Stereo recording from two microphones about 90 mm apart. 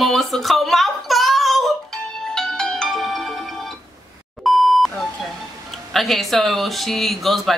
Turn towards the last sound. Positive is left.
turn(degrees=0)  # may be behind; listen again after turning